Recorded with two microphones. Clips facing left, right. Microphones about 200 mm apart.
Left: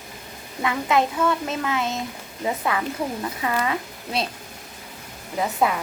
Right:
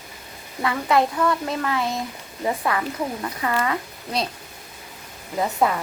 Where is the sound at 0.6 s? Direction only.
20° left (ahead or behind).